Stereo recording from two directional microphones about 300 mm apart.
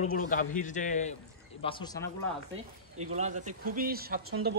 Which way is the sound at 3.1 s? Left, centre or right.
Right.